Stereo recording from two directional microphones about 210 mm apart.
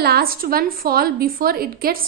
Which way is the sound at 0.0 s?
45° right (ahead or behind).